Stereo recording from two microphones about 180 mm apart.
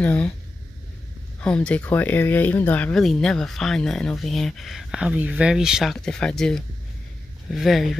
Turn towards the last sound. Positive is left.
turn(degrees=0)  # may be behind; listen again after turning